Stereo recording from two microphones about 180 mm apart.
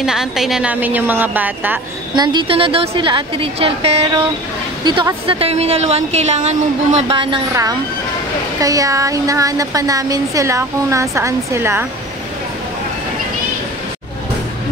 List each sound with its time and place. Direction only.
0.0 s a woman's voice: 5° right (ahead or behind)
2.1 s a woman's voice: 25° right (ahead or behind)
8.5 s speech: 20° right (ahead or behind)